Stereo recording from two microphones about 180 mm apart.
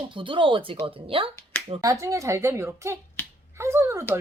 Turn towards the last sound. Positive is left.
turn(degrees=-15)  # may be behind; listen again after turning